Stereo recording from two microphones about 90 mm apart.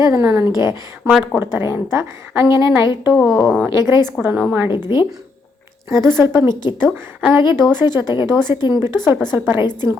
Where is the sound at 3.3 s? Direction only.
5° left (ahead or behind).